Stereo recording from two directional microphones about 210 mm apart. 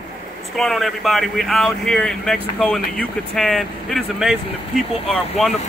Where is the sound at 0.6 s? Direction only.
Centre (ahead or behind).